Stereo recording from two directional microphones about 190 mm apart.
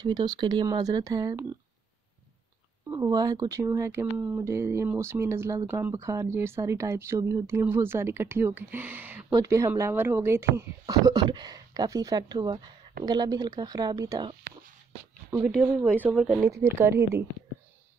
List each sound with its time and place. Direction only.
0.0 s speech: 20° right (ahead or behind)
2.9 s speech: 20° right (ahead or behind)
15.3 s speech: 20° right (ahead or behind)